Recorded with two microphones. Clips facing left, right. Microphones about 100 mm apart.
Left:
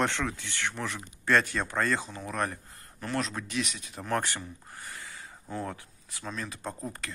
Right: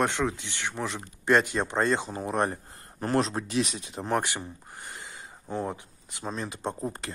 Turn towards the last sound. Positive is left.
turn(degrees=-25)  # may be behind; listen again after turning